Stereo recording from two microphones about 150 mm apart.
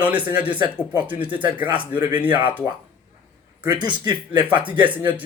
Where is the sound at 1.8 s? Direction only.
10° right (ahead or behind).